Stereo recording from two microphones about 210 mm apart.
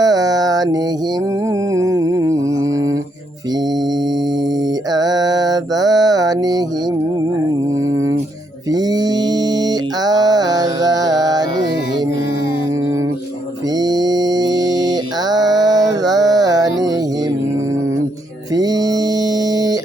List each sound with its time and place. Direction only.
0.0 s a sound: 20° right (ahead or behind)
1.7 s music: 15° right (ahead or behind)
4.9 s mantra: 20° right (ahead or behind)
7.9 s music: 70° right (ahead or behind)
8.7 s mantra: 20° right (ahead or behind)
13.7 s mantra: 20° right (ahead or behind)
18.5 s mantra: 20° right (ahead or behind)